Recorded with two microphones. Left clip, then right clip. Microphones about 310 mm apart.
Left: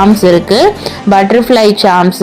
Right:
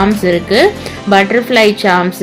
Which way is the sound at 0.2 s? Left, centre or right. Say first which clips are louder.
Left 3 dB; centre.